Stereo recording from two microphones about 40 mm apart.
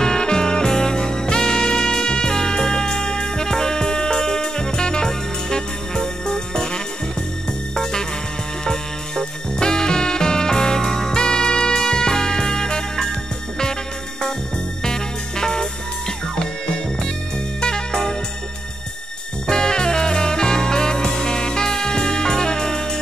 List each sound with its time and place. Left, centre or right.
0.0 s music: centre
14.8 s music: centre
17.6 s music: centre
19.4 s music: centre